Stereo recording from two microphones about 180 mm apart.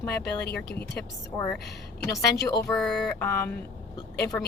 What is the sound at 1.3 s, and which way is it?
Speech, 15° left (ahead or behind).